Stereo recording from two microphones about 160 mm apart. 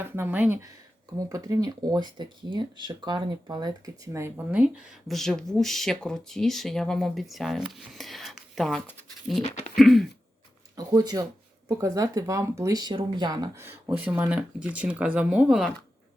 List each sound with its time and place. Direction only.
0.0 s speech: 15° right (ahead or behind)
4.5 s speech: 5° right (ahead or behind)
9.4 s speech: 45° left (ahead or behind)
9.7 s speech: centre (ahead or behind)
10.8 s speech: 25° right (ahead or behind); by 15.7 s 5° right (ahead or behind)